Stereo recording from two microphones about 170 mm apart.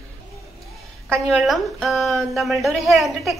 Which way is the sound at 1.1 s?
Centre (ahead or behind).